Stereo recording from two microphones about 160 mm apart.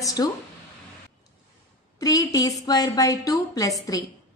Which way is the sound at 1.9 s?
20° left (ahead or behind).